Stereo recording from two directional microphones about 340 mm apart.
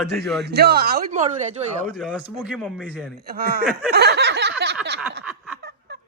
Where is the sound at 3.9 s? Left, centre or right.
Right.